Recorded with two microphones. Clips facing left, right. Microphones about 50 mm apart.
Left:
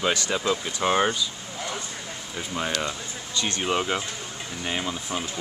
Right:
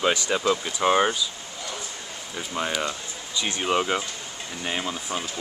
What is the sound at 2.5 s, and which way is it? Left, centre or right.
Speech, centre.